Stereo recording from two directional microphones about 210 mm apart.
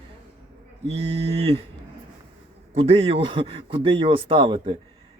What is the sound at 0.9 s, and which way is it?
Speech, 30° right (ahead or behind).